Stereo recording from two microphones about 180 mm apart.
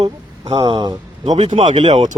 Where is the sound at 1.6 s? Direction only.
40° right (ahead or behind).